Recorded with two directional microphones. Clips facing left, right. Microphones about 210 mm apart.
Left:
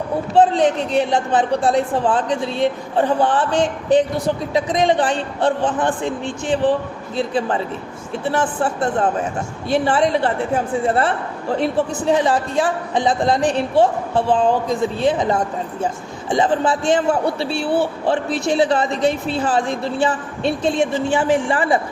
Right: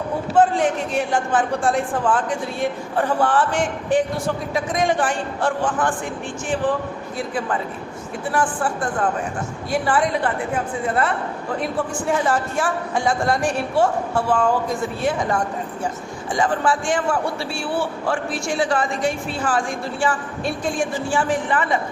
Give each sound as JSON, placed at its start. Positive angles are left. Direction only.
{"t": 0.3, "sound": "a man's voice", "side_deg": 20}
{"t": 1.6, "sound": "a man's voice", "side_deg": 35}
{"t": 2.1, "sound": "a man's voice", "side_deg": 25}
{"t": 4.5, "sound": "a man's voice", "side_deg": 20}
{"t": 7.2, "sound": "a man's voice", "side_deg": 25}
{"t": 14.3, "sound": "a man's voice", "side_deg": 30}
{"t": 14.8, "sound": "a man's voice", "side_deg": 20}